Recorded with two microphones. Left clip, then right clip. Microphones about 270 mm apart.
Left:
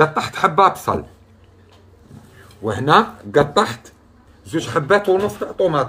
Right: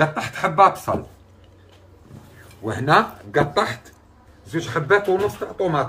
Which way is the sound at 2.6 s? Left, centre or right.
Left.